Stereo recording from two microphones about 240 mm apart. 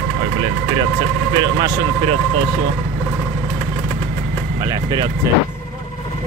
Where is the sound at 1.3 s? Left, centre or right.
Centre.